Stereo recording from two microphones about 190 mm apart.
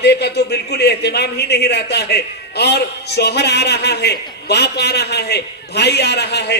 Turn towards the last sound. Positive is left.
turn(degrees=60)  # may be behind; listen again after turning